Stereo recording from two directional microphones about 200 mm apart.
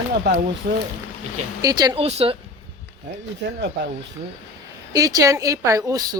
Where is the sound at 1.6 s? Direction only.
20° right (ahead or behind).